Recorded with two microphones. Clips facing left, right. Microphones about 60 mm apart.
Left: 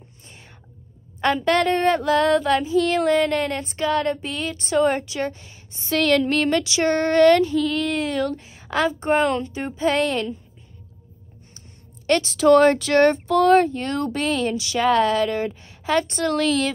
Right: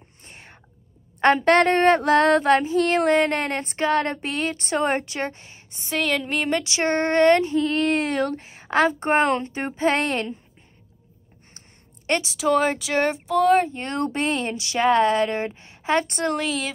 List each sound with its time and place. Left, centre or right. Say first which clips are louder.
0.2 s whispering: right 3 dB; right
1.2 s female singing: right 3 dB; right
5.9 s speech: left 5 dB; centre
6.6 s female singing: left 2 dB; right
12.2 s speech: left 7 dB; centre
13.7 s speech: left 2 dB; right
16.4 s speech: left 6 dB; centre